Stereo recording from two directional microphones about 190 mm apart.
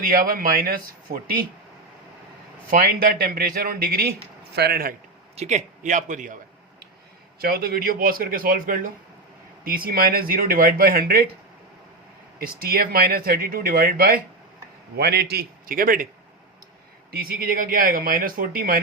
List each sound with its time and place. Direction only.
0.0 s speech: 50° right (ahead or behind)
2.6 s a man's voice: 50° right (ahead or behind)
5.4 s a man's voice: 40° right (ahead or behind)
12.4 s a man's voice: 50° right (ahead or behind)
17.1 s speech: 50° right (ahead or behind)